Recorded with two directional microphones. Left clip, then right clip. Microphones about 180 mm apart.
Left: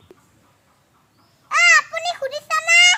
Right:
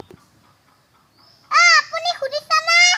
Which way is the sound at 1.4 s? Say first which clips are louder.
Right 1 dB; 15° left (ahead or behind).